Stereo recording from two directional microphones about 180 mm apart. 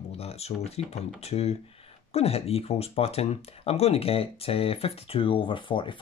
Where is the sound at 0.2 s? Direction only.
35° left (ahead or behind).